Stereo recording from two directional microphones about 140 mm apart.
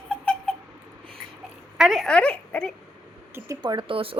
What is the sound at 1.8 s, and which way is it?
Speech, centre (ahead or behind).